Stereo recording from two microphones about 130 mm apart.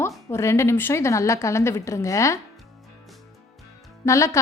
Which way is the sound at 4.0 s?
20° left (ahead or behind).